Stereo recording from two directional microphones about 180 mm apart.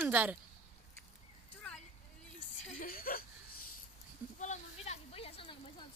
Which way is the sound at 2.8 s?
55° left (ahead or behind).